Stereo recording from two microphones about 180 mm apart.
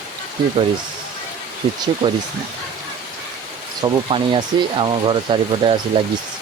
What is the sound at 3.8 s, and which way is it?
Speech, 30° right (ahead or behind).